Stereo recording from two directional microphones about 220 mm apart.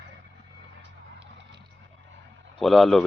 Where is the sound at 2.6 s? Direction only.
Centre (ahead or behind).